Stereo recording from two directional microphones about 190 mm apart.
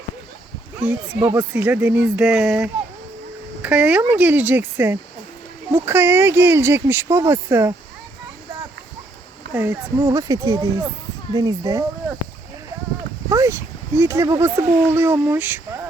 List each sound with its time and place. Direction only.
0.8 s speech: 5° right (ahead or behind)
9.5 s speech: 10° right (ahead or behind)
13.3 s speech: 15° right (ahead or behind)